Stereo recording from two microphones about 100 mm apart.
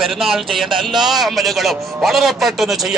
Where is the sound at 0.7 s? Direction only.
55° right (ahead or behind).